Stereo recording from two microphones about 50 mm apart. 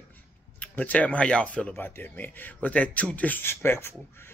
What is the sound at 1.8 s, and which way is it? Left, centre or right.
Speech, left.